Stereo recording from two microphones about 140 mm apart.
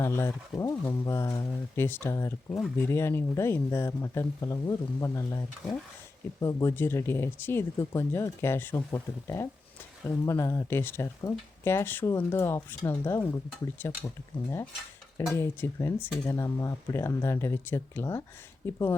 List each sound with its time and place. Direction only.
0.0 s speech: 15° left (ahead or behind)
6.4 s speech: 25° left (ahead or behind)
15.4 s speech: 20° left (ahead or behind)